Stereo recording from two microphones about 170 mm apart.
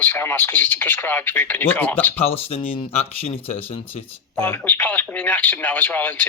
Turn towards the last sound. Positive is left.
turn(degrees=10)  # may be behind; listen again after turning